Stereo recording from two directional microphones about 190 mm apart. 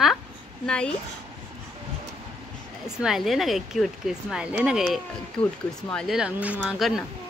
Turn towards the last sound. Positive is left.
turn(degrees=0)  # may be behind; listen again after turning